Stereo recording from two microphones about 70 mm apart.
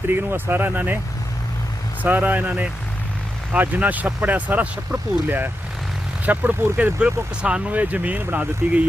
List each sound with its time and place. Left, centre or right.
0.1 s speech: right
2.0 s speech: right
7.0 s speech: centre